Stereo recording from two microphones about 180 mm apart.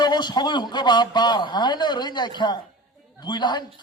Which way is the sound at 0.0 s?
25° left (ahead or behind).